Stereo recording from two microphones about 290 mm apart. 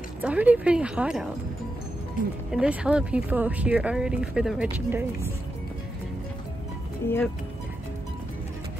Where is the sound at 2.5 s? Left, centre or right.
Centre.